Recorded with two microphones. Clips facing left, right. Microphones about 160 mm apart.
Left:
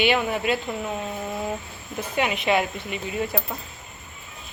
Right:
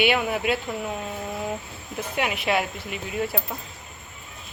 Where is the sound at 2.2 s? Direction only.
Centre (ahead or behind).